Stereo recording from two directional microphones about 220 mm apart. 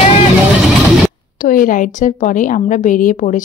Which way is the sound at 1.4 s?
40° left (ahead or behind).